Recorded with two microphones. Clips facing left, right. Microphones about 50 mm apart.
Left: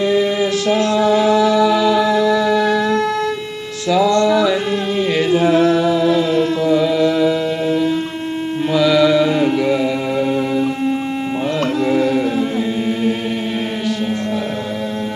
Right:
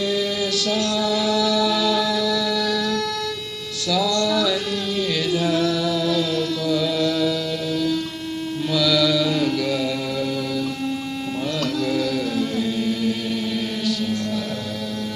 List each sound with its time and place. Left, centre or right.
0.0 s mantra: left
0.7 s music: left
3.8 s mantra: left
4.9 s chant: left
8.7 s mantra: left
11.6 s music: left